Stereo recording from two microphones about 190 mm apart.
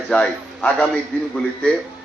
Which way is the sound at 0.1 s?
5° left (ahead or behind).